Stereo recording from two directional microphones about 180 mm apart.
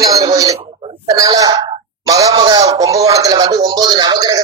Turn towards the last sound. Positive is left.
turn(degrees=-20)  # may be behind; listen again after turning